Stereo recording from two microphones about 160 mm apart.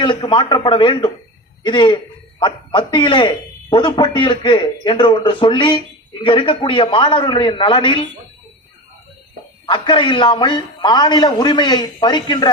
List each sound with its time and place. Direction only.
0.0 s a man's voice: 30° left (ahead or behind)
9.6 s a man's voice: 30° left (ahead or behind)